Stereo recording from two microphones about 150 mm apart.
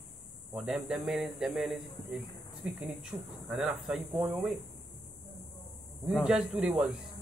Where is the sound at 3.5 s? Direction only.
5° right (ahead or behind).